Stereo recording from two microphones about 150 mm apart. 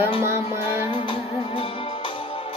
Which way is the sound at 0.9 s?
35° left (ahead or behind).